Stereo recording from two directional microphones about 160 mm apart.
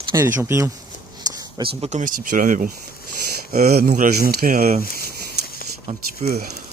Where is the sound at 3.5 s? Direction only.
75° right (ahead or behind).